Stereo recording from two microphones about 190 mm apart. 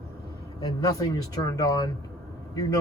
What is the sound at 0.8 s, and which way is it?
A man's voice, 20° left (ahead or behind).